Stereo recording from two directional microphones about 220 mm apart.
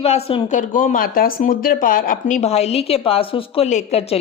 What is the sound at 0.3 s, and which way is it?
Speech, 30° left (ahead or behind).